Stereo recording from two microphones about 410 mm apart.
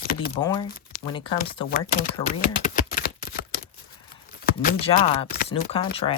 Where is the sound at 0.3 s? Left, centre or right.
Centre.